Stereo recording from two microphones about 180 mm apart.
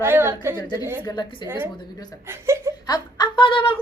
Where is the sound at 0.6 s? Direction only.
20° left (ahead or behind).